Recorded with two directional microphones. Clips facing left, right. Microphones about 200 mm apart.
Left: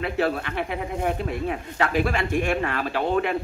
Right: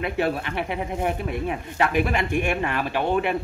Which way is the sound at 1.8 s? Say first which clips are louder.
Right 1 dB; 20° right (ahead or behind).